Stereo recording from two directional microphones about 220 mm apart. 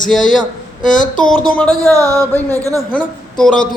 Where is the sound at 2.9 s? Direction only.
5° left (ahead or behind).